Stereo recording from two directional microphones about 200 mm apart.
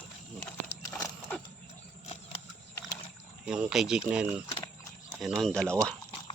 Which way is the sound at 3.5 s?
5° right (ahead or behind).